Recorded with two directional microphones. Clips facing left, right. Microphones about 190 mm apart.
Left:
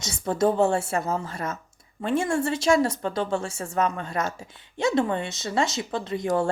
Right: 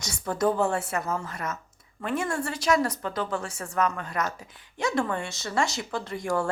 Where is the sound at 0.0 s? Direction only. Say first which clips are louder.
Left 3 dB; 25° left (ahead or behind).